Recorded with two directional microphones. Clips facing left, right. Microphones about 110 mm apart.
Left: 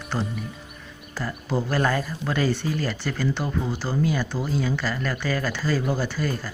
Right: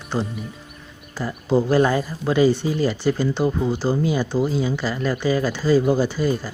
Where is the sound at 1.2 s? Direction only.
15° right (ahead or behind).